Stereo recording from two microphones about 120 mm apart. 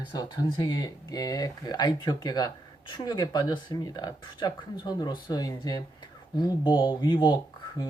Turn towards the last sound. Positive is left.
turn(degrees=40)  # may be behind; listen again after turning